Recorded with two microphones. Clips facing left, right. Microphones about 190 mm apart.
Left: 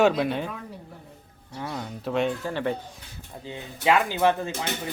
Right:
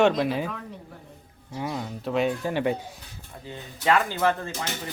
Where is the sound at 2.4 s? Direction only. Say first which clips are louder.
Right 2 dB; 15° right (ahead or behind).